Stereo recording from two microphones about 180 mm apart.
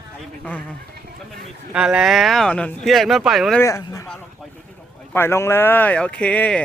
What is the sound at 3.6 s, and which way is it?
Speech, 20° left (ahead or behind).